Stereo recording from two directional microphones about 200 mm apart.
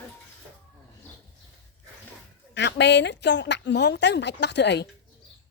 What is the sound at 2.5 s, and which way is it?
A woman's voice, 60° left (ahead or behind).